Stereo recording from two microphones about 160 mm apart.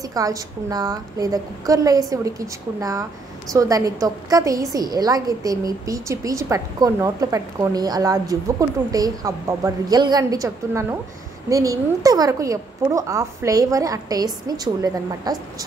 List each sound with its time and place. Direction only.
0.1 s a woman's voice: 20° right (ahead or behind)